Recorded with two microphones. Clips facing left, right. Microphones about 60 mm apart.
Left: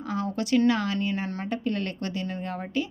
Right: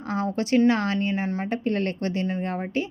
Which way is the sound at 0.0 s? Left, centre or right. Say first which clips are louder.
Right 3 dB; right.